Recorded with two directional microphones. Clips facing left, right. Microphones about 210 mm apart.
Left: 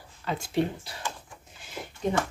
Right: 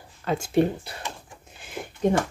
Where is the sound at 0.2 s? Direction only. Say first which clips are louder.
Right 6 dB; 50° right (ahead or behind).